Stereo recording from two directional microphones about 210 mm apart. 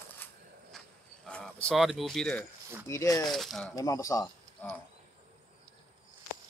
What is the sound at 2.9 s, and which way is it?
Speech, 15° left (ahead or behind).